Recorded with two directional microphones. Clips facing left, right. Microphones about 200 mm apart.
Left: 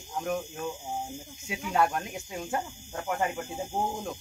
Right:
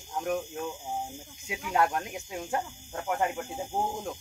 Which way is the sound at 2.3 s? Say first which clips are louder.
Even; centre (ahead or behind).